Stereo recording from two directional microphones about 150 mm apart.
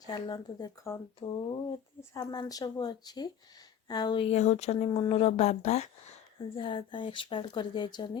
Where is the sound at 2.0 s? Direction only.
25° left (ahead or behind); by 5.9 s 50° left (ahead or behind).